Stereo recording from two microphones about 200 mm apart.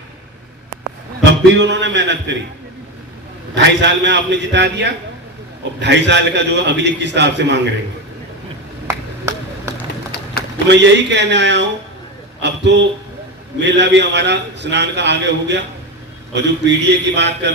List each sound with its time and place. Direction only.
1.2 s a man's voice: 60° right (ahead or behind)
3.5 s a man's voice: 60° right (ahead or behind)
10.7 s a man's voice: 60° right (ahead or behind)